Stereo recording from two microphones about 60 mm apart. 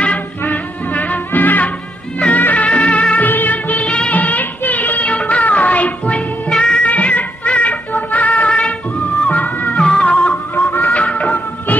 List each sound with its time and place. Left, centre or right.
0.4 s music: left
6.9 s music: left
10.5 s music: left
10.9 s music: centre